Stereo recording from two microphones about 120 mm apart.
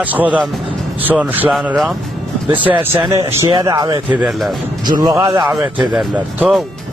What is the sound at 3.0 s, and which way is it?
Speech, 25° right (ahead or behind).